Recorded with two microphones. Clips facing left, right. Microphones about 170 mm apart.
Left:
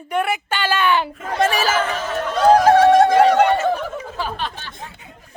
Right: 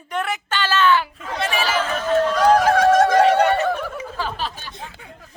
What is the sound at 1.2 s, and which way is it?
Speech, 45° left (ahead or behind).